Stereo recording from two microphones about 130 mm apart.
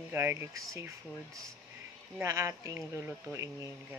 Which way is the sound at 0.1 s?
20° right (ahead or behind).